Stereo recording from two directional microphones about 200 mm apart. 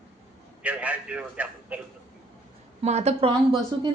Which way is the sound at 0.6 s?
5° right (ahead or behind).